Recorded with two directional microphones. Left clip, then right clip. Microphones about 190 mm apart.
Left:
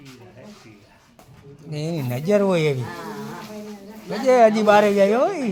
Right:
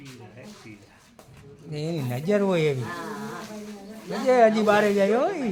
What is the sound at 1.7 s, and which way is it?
A man's voice, 25° left (ahead or behind).